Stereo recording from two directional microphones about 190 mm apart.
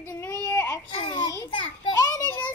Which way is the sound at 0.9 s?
25° left (ahead or behind).